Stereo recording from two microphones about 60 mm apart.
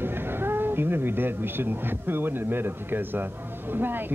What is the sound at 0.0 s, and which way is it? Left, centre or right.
A man's voice, right.